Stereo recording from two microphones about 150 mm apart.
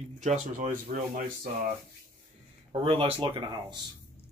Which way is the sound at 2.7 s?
40° right (ahead or behind).